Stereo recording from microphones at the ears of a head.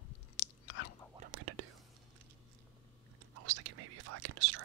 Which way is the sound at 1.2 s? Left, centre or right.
Right.